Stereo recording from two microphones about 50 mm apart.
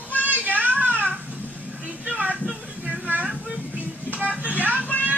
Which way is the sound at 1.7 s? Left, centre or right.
Right.